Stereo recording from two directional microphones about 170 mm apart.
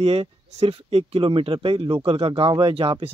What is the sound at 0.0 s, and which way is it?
Speech, 35° right (ahead or behind).